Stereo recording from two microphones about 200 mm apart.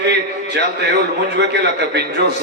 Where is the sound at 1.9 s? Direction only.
55° right (ahead or behind).